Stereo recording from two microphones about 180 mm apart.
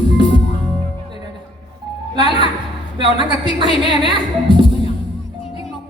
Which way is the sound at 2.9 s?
25° right (ahead or behind).